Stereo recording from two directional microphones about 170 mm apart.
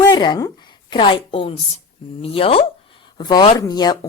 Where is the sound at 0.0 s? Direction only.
25° left (ahead or behind).